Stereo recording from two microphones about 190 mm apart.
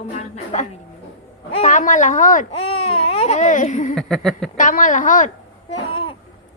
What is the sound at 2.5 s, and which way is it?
A woman's voice, 30° left (ahead or behind).